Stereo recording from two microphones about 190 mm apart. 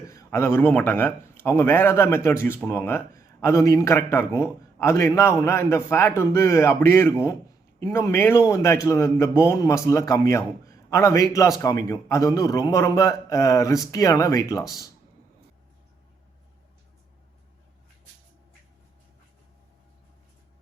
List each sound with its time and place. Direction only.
0.1 s speech: 15° left (ahead or behind)